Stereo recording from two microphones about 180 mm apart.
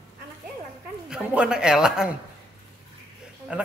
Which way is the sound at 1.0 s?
5° right (ahead or behind).